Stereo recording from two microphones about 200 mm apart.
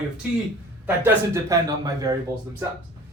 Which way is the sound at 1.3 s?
15° right (ahead or behind).